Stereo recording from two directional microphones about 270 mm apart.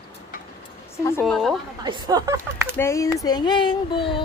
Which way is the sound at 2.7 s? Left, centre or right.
Centre.